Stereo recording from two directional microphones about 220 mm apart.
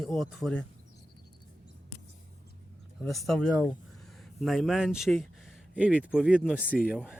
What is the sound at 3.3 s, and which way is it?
Speech, centre (ahead or behind).